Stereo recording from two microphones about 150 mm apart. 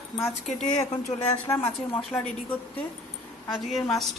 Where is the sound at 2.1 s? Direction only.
10° left (ahead or behind).